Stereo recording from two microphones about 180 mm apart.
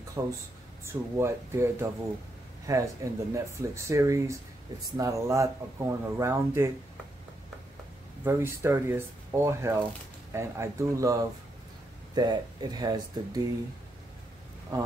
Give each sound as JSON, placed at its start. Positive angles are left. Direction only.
{"t": 0.2, "sound": "speech", "side_deg": -15}
{"t": 8.2, "sound": "speech", "side_deg": -15}
{"t": 12.2, "sound": "speech", "side_deg": -20}